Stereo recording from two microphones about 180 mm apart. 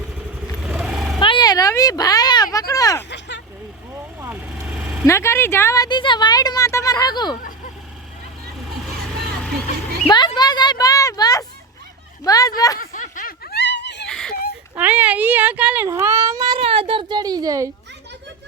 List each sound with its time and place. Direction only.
0.6 s vehicle: 5° right (ahead or behind)
1.2 s a sound: 25° left (ahead or behind)
3.1 s vehicle: 80° left
4.2 s vehicle: 15° right (ahead or behind)
4.6 s vehicle: centre (ahead or behind)
5.0 s speech: 15° left (ahead or behind)
10.1 s a sound: 25° left (ahead or behind)
12.2 s speech: 20° left (ahead or behind)
12.8 s snicker: 50° left (ahead or behind); by 14.1 s 75° left (ahead or behind)
14.1 s a sound: 5° left (ahead or behind)
14.8 s a child's voice: 10° right (ahead or behind)